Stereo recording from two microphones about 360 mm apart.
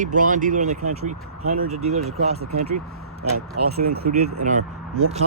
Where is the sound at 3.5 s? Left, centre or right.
Right.